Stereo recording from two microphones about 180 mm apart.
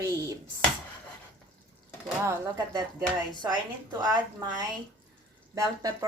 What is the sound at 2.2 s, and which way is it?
Speech, 20° right (ahead or behind).